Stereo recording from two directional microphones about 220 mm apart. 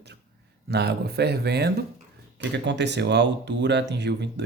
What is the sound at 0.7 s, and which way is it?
Speech, 50° right (ahead or behind).